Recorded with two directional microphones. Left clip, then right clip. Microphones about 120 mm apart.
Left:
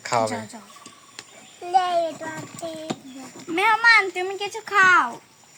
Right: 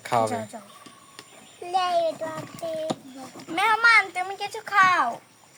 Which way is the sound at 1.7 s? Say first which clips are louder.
Left 3 dB; 20° left (ahead or behind).